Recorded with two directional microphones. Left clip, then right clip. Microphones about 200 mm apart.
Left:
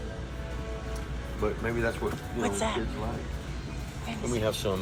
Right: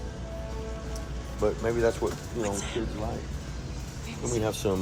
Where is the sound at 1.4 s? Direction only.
50° right (ahead or behind).